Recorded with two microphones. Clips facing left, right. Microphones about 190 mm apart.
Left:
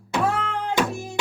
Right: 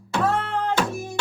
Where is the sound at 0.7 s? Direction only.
15° left (ahead or behind).